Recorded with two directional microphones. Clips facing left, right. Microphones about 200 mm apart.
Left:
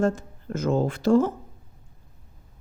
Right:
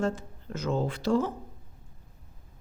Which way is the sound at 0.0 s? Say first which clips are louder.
Left 6 dB; 50° left (ahead or behind).